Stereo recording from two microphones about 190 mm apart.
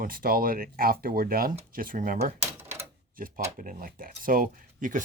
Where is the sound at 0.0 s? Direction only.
50° right (ahead or behind).